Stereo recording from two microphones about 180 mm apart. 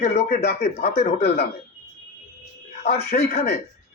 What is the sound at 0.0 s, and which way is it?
Speech, 55° left (ahead or behind).